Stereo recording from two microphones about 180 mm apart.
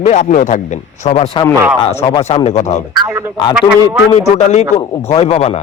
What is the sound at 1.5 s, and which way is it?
Speech, 15° right (ahead or behind).